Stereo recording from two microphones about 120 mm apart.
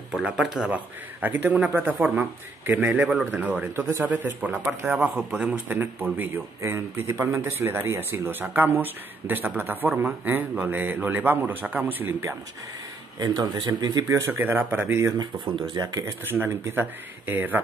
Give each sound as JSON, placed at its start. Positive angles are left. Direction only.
{"t": 0.1, "sound": "speech", "side_deg": 0}
{"t": 0.7, "sound": "speech", "side_deg": -15}
{"t": 13.2, "sound": "speech", "side_deg": -35}
{"t": 14.0, "sound": "speech", "side_deg": -20}
{"t": 15.1, "sound": "speech", "side_deg": -40}
{"t": 16.3, "sound": "speech", "side_deg": -20}